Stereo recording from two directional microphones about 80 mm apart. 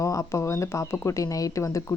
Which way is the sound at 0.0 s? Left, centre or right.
Left.